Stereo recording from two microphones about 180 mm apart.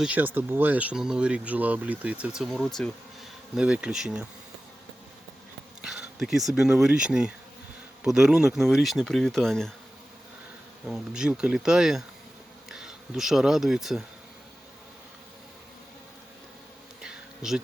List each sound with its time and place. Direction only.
0.0 s speech: 10° right (ahead or behind)
5.8 s speech: centre (ahead or behind)
10.8 s speech: 5° right (ahead or behind)
17.0 s insect: 5° right (ahead or behind)